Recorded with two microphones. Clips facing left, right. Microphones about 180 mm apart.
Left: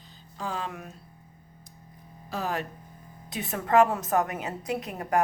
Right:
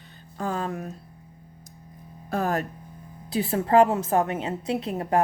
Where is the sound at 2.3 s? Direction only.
45° right (ahead or behind).